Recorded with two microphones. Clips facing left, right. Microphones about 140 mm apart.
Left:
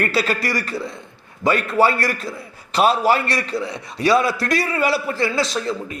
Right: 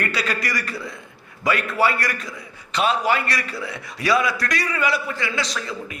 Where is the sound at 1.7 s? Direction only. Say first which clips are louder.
Left 4 dB; 25° left (ahead or behind).